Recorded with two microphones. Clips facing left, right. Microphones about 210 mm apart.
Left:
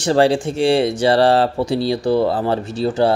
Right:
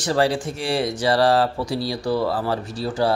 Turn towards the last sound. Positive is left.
turn(degrees=25)  # may be behind; listen again after turning